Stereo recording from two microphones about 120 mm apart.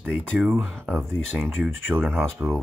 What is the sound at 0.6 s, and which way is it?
Speech, 5° left (ahead or behind).